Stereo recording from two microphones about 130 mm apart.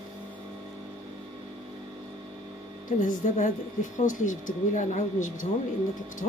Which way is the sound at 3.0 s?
80° left.